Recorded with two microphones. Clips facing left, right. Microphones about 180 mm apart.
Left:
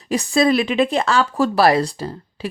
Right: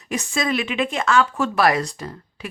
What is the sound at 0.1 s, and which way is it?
Speech, 35° left (ahead or behind).